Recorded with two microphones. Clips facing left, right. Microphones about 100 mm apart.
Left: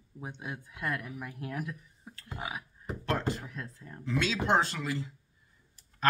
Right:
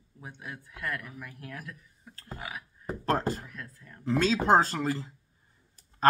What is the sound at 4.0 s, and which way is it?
A man's voice, 40° right (ahead or behind).